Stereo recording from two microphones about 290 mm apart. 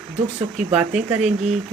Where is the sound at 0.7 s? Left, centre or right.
Centre.